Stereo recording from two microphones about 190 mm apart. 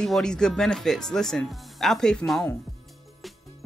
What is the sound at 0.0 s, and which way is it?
Speech, 5° left (ahead or behind).